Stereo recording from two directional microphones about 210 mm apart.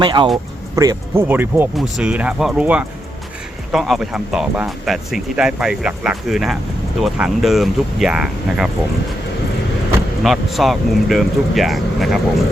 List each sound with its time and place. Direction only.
0.0 s speech: 25° right (ahead or behind); by 8.7 s 5° right (ahead or behind)
10.2 s speech: centre (ahead or behind)